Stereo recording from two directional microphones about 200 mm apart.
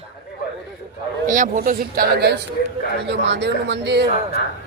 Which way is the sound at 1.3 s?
35° right (ahead or behind).